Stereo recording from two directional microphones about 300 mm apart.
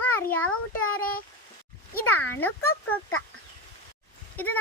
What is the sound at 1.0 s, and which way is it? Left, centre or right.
Speech, left.